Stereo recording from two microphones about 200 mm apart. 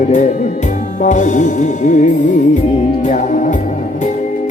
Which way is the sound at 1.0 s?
35° left (ahead or behind).